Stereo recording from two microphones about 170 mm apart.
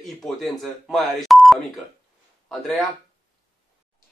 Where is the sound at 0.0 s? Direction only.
Centre (ahead or behind).